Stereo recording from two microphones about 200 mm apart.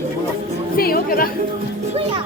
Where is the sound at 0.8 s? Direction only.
50° left (ahead or behind).